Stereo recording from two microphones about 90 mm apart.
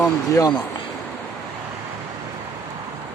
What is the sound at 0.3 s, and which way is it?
Speech, 45° left (ahead or behind).